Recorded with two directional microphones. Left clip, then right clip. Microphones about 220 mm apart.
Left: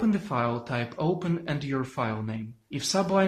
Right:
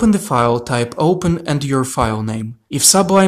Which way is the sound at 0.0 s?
45° right (ahead or behind).